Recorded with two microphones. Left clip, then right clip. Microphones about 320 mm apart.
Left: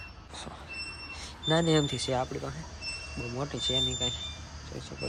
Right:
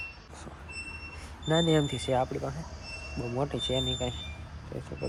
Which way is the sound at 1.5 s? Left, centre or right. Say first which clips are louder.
Even; centre.